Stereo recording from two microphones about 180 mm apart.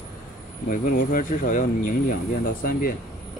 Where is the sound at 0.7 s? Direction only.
50° left (ahead or behind).